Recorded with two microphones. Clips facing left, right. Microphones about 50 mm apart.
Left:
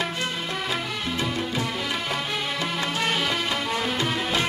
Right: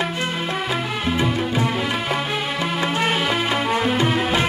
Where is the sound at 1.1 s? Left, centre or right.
Centre.